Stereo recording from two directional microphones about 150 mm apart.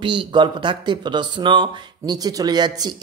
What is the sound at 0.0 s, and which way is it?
Speech, 35° right (ahead or behind).